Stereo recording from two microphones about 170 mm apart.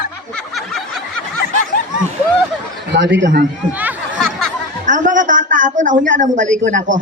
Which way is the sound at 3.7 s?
10° right (ahead or behind).